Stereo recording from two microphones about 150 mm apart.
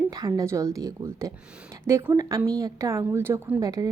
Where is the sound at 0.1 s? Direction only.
25° right (ahead or behind).